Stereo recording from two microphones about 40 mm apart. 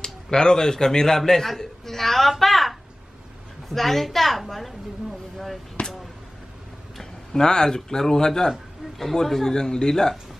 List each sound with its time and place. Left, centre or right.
0.0 s a man's voice: centre
5.8 s a sound: left
7.0 s a man's voice: centre